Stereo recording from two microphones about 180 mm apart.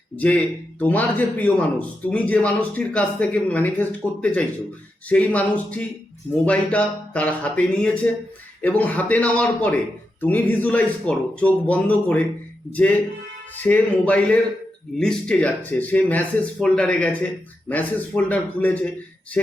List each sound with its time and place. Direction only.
0.2 s speech: 10° left (ahead or behind)